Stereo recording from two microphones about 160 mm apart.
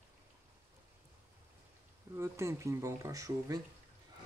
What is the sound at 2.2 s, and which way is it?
Speech, 15° right (ahead or behind).